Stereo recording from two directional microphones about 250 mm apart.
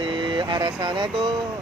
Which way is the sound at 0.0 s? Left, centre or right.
Centre.